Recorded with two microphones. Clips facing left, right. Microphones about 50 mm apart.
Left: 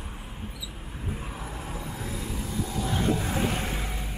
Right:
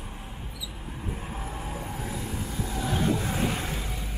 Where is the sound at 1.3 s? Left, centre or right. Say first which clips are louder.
Right 1 dB; right.